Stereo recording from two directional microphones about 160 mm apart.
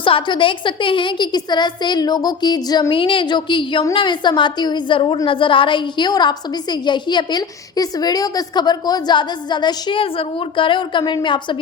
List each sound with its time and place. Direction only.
0.0 s a woman's voice: 30° left (ahead or behind)